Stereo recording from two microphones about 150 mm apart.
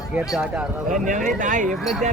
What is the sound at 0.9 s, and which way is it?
Speech, 60° right (ahead or behind).